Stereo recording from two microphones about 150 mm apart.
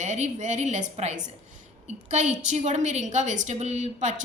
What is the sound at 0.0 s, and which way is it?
A woman's voice, 50° right (ahead or behind).